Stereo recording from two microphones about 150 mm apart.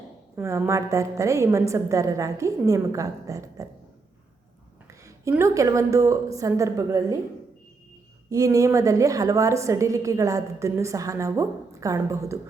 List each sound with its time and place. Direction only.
0.3 s a woman's voice: 15° right (ahead or behind)
5.4 s a woman's voice: 20° right (ahead or behind)
8.3 s a woman's voice: 20° right (ahead or behind)